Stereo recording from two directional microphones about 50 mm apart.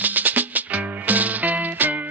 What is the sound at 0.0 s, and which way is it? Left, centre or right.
Music, right.